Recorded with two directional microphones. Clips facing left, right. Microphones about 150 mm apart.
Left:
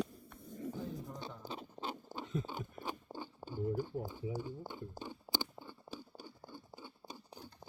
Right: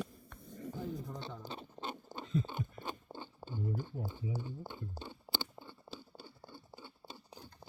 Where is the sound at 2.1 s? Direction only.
10° left (ahead or behind).